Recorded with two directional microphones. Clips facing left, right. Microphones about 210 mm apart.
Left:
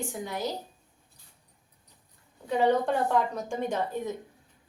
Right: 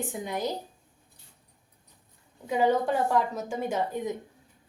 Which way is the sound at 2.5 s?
5° right (ahead or behind).